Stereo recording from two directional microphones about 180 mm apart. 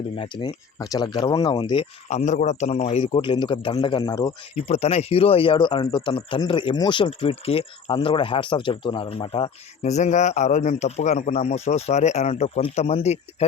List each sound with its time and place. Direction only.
0.2 s speech: 25° left (ahead or behind)
4.6 s speech: 35° left (ahead or behind)